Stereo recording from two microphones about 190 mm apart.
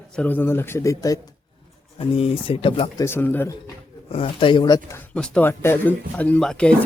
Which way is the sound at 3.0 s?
10° left (ahead or behind).